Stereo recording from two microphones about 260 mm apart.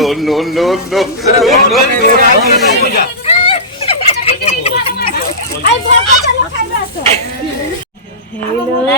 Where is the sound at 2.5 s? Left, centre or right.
Left.